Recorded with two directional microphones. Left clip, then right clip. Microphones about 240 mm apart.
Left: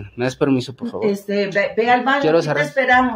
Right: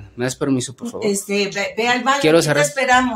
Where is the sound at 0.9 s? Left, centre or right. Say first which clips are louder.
Even; right.